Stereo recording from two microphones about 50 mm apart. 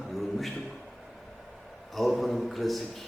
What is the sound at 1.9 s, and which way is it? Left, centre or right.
Speech, centre.